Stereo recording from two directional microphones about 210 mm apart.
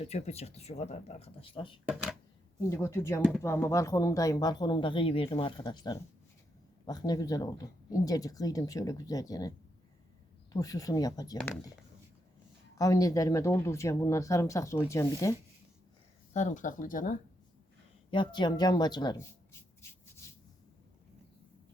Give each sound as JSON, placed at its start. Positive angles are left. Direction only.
{"t": 0.0, "sound": "speech", "side_deg": 30}
{"t": 2.6, "sound": "speech", "side_deg": 15}
{"t": 3.2, "sound": "speech", "side_deg": -5}
{"t": 3.4, "sound": "speech", "side_deg": 15}
{"t": 12.7, "sound": "speech", "side_deg": 15}
{"t": 16.3, "sound": "speech", "side_deg": 35}
{"t": 18.1, "sound": "speech", "side_deg": 20}
{"t": 20.2, "sound": "a sound", "side_deg": 15}